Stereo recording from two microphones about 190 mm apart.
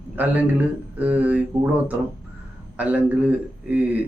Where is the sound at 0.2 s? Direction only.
10° right (ahead or behind).